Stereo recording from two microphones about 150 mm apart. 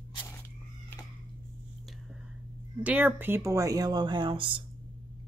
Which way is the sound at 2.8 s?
10° right (ahead or behind).